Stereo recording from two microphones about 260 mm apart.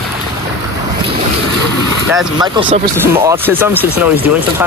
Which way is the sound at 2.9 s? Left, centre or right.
Centre.